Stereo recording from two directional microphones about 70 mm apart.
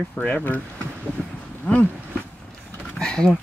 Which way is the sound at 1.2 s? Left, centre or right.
Centre.